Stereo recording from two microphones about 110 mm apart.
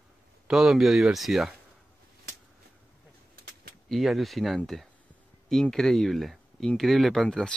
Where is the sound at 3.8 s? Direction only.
Centre (ahead or behind).